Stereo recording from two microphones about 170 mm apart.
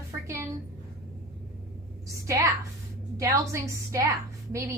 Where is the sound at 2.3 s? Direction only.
20° right (ahead or behind).